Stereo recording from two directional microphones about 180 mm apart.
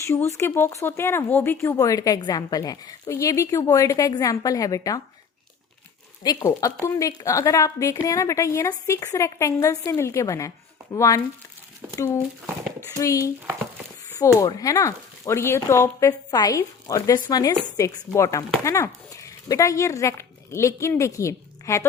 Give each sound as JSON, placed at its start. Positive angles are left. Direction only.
{"t": 0.0, "sound": "speech", "side_deg": 15}
{"t": 6.2, "sound": "speech", "side_deg": 20}
{"t": 13.0, "sound": "speech", "side_deg": 15}